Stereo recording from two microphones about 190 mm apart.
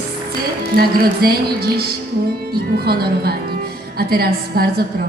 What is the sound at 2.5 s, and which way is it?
A woman's voice, 55° right (ahead or behind).